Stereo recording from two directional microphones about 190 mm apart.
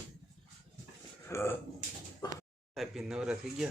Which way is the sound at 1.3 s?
15° left (ahead or behind).